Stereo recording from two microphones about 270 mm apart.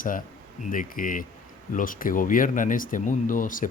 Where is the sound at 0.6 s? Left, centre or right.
Left.